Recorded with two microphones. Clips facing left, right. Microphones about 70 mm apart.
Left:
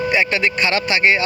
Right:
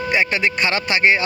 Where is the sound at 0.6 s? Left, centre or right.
Right.